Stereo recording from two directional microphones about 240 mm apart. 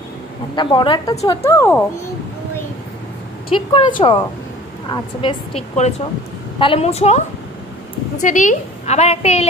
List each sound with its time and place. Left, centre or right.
0.6 s a woman's voice: centre
3.4 s a woman's voice: left